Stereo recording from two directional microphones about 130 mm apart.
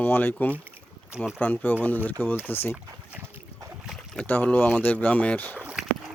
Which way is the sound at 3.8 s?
Centre (ahead or behind).